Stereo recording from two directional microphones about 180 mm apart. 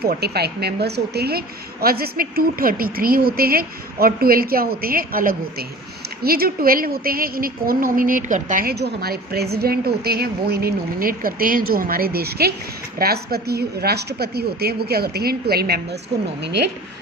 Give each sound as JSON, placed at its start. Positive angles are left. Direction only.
{"t": 0.0, "sound": "a woman's voice", "side_deg": -60}